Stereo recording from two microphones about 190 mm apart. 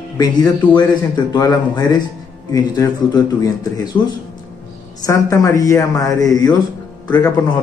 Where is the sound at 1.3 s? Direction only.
20° left (ahead or behind).